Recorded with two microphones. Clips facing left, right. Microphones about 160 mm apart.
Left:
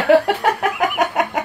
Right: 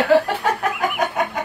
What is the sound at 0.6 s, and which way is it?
Chicken, 75° left (ahead or behind).